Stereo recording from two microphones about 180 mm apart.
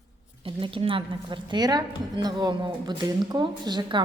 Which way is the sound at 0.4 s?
30° right (ahead or behind).